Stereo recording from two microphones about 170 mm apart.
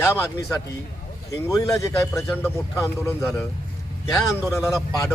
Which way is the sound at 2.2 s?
Centre (ahead or behind).